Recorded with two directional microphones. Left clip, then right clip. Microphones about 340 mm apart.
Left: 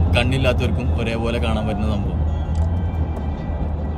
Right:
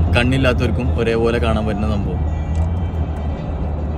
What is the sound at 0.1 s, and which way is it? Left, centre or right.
A man's voice, centre.